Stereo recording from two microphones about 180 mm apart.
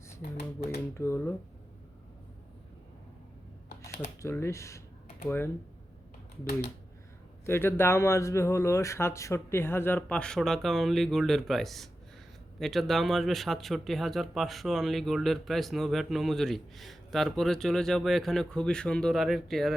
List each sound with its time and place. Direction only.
0.2 s speech: 55° left (ahead or behind)
0.9 s a man's voice: 15° left (ahead or behind)
4.2 s a man's voice: 15° left (ahead or behind)
6.4 s speech: 60° left (ahead or behind)
7.4 s a man's voice: 15° left (ahead or behind)